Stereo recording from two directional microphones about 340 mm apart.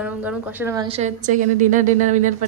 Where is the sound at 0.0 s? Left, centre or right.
Centre.